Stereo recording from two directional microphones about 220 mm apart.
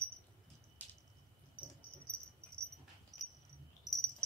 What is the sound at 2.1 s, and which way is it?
Cricket, 5° left (ahead or behind).